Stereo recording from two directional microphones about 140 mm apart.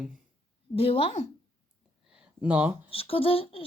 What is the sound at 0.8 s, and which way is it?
Speech, 45° left (ahead or behind).